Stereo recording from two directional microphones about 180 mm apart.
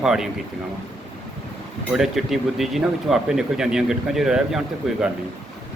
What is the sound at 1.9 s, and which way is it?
Speech, centre (ahead or behind).